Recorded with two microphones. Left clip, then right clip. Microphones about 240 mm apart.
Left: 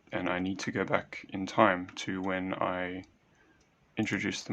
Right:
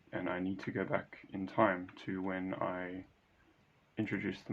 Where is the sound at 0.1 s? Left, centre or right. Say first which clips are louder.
Left 6 dB; left.